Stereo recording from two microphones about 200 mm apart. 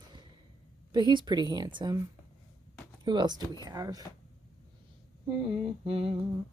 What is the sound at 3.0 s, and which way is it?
Speech, 20° right (ahead or behind).